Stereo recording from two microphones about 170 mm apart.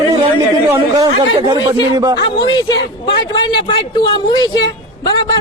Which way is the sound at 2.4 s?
25° left (ahead or behind).